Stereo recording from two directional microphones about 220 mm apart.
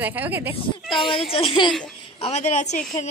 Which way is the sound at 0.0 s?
10° right (ahead or behind).